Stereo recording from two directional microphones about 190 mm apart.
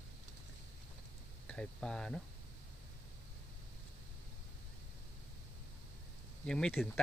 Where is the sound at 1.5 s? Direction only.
5° left (ahead or behind).